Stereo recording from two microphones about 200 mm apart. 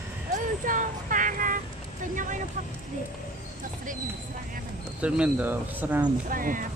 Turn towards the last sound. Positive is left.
turn(degrees=-45)  # may be behind; listen again after turning